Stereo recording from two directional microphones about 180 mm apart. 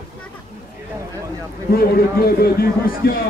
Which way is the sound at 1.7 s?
55° left (ahead or behind).